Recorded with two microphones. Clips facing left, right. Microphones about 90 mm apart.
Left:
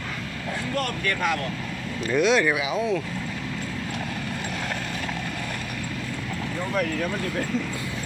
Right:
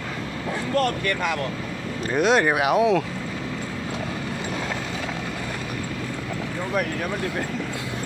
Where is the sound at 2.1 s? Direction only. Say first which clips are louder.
Right 1 dB; 45° right (ahead or behind).